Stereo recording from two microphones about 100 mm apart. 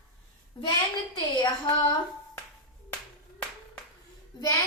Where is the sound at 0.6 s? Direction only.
60° left (ahead or behind).